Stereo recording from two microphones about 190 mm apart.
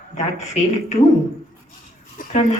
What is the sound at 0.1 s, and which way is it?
Speech, 40° left (ahead or behind).